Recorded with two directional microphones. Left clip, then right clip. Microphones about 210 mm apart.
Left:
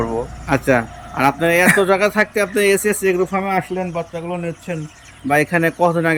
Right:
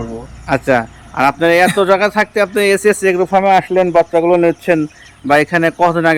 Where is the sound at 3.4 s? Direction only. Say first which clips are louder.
Right 10 dB; 65° right (ahead or behind).